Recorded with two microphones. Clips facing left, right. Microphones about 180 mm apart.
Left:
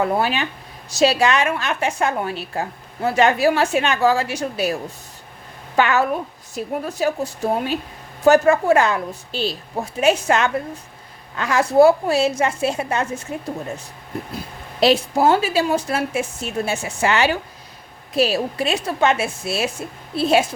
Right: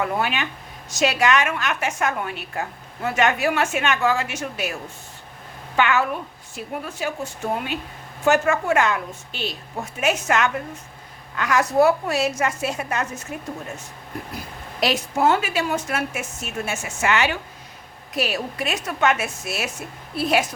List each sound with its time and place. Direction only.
0.0 s a woman's voice: 35° left (ahead or behind)
14.3 s a woman's voice: 30° left (ahead or behind)